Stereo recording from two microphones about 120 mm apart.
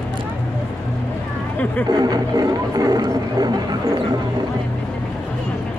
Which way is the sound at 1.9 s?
35° right (ahead or behind).